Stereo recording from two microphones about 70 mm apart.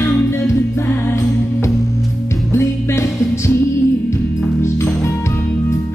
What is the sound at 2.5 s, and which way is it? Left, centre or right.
Music, left.